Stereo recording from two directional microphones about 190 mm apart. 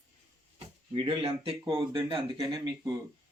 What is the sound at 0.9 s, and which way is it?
Speech, 30° right (ahead or behind).